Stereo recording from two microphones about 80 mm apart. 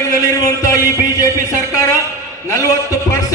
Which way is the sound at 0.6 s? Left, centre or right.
Left.